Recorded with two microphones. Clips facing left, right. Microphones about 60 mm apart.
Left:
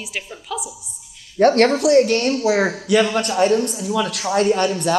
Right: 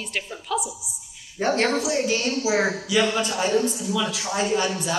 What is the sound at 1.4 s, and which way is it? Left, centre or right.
A woman's voice, left.